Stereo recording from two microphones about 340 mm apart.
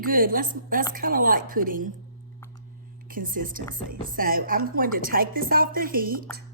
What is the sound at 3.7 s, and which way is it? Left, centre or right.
Music, right.